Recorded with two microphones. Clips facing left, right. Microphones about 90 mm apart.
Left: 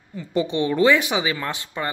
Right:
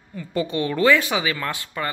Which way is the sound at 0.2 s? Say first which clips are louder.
Left 2 dB; 20° left (ahead or behind).